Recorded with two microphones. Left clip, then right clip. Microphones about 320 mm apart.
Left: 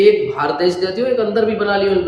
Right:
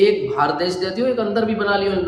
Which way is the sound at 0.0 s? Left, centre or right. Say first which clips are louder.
Left 3 dB; centre.